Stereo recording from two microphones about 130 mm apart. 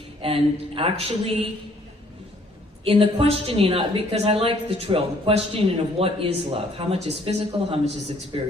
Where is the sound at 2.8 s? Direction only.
45° right (ahead or behind).